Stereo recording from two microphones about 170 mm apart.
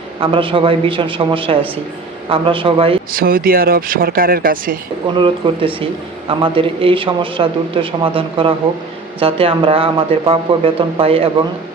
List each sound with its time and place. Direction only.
0.2 s speech: 30° right (ahead or behind)
3.1 s speech: 60° right (ahead or behind)
5.1 s speech: 30° right (ahead or behind)